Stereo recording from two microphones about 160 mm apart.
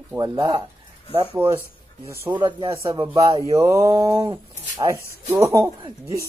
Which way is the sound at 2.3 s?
30° right (ahead or behind).